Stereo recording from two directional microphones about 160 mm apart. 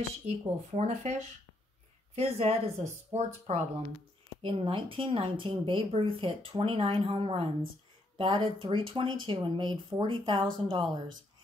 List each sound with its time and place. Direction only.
0.4 s speech: 40° right (ahead or behind)